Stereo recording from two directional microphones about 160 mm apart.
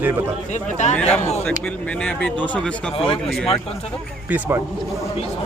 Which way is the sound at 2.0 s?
10° left (ahead or behind).